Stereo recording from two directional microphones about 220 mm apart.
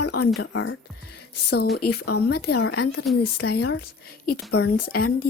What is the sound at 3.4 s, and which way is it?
Speech, 45° left (ahead or behind).